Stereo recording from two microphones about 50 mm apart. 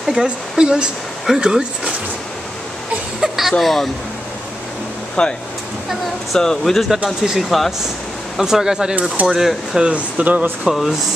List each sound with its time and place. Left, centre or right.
0.1 s speech: centre
3.2 s a sound: centre
3.5 s speech: centre
5.2 s speech: centre
6.3 s speech: centre
7.2 s speech: centre
9.9 s speech: right
10.7 s speech: centre